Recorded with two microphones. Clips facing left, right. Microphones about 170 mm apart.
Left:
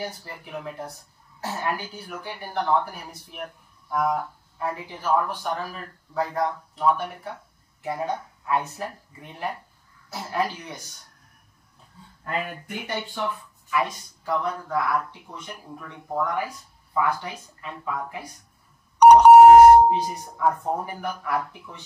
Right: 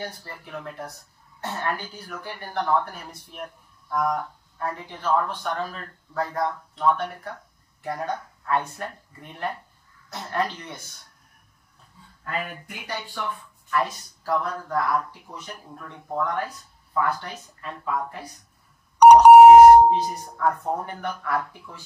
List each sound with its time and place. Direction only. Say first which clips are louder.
0.0 s speech: left 2 dB; 10° left (ahead or behind)
12.3 s speech: left 2 dB; 25° left (ahead or behind)
13.8 s speech: right 1 dB; centre (ahead or behind)
15.4 s speech: left 1 dB; 5° left (ahead or behind)
19.0 s doorbell: right 1 dB; 10° right (ahead or behind)
19.9 s speech: right 1 dB; centre (ahead or behind)